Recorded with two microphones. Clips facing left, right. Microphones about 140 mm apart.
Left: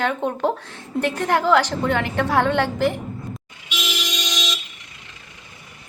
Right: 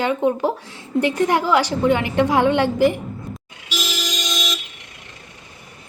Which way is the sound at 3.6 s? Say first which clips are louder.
Right 2 dB; 40° right (ahead or behind).